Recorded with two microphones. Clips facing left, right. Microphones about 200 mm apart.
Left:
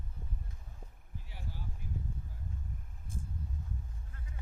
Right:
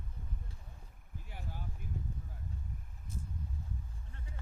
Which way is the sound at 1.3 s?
50° right (ahead or behind).